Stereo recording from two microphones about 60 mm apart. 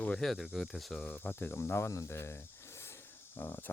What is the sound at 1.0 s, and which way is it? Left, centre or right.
Speech, left.